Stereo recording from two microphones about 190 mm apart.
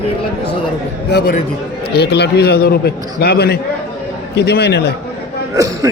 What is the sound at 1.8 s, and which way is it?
A man's voice, 60° left (ahead or behind).